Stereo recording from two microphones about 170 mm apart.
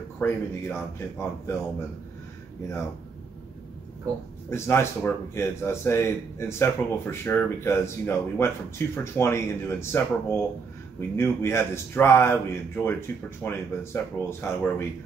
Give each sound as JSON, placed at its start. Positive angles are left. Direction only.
{"t": 0.2, "sound": "speech", "side_deg": 15}
{"t": 4.5, "sound": "speech", "side_deg": 15}